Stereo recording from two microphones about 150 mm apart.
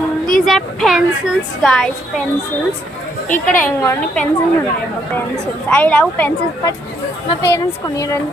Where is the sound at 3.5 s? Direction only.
10° left (ahead or behind).